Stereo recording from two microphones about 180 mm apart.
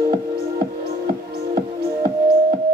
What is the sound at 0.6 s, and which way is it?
Music, 55° right (ahead or behind).